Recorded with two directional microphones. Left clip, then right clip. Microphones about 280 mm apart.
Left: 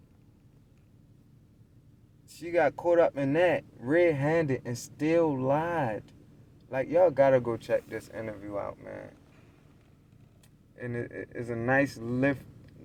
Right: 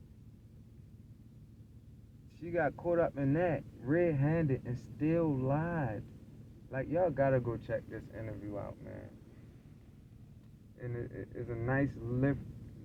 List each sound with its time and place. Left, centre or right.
2.4 s speech: left
10.8 s speech: left